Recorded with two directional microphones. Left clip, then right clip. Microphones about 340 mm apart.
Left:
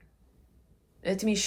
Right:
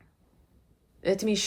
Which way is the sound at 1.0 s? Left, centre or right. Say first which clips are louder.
Right 3 dB; centre.